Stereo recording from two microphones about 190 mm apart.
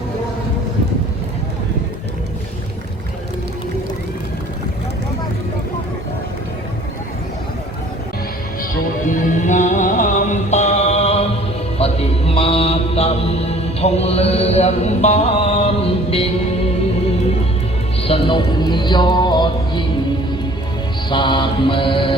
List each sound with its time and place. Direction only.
9.0 s music: 40° left (ahead or behind)
11.8 s mantra: 30° left (ahead or behind)
18.0 s music: 25° left (ahead or behind)
21.1 s mantra: 25° left (ahead or behind)